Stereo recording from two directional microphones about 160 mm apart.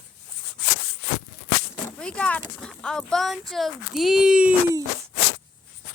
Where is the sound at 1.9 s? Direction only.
5° left (ahead or behind).